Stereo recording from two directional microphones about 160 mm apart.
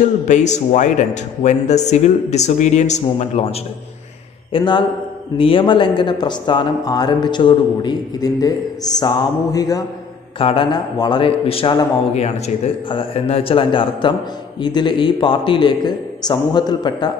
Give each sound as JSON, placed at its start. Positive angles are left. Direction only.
{"t": 0.3, "sound": "speech", "side_deg": 45}
{"t": 4.5, "sound": "speech", "side_deg": 30}
{"t": 10.4, "sound": "speech", "side_deg": 35}